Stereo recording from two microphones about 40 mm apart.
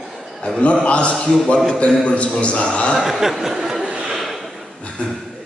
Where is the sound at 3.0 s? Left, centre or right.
Centre.